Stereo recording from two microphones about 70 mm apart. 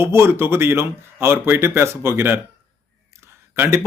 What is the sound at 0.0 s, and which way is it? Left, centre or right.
Speech, right.